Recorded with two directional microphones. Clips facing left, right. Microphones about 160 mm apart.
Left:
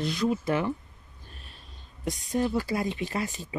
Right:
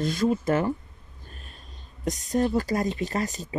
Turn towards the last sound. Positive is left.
turn(degrees=-40)  # may be behind; listen again after turning